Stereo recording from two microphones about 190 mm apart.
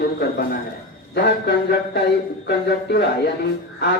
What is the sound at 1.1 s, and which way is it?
Speech, 60° left (ahead or behind).